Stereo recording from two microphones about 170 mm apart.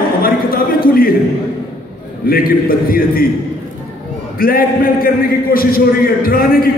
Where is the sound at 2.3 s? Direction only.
60° left (ahead or behind).